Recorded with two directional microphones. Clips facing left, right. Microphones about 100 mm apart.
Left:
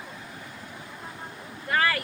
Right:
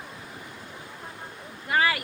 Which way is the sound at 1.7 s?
15° right (ahead or behind).